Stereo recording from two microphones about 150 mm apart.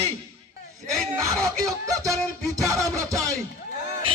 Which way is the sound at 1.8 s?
25° right (ahead or behind).